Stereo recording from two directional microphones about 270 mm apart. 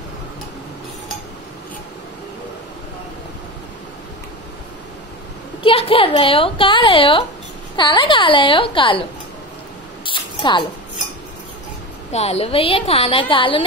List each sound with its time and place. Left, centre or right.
5.6 s a woman's voice: centre
10.0 s a sound: centre
12.1 s a woman's voice: left